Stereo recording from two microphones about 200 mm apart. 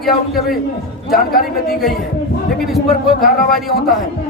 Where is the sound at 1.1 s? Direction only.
50° left (ahead or behind).